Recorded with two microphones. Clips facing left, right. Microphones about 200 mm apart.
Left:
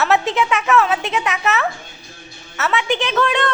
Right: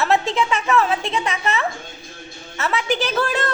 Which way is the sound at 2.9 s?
40° right (ahead or behind).